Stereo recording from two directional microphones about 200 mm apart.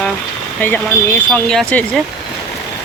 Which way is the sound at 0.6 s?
10° left (ahead or behind).